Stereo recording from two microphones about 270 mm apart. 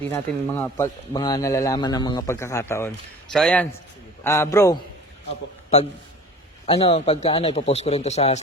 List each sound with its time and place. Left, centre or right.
0.0 s a man's voice: centre
6.7 s a man's voice: left